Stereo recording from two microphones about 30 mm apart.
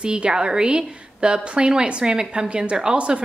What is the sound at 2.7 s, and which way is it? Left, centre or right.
Speech, right.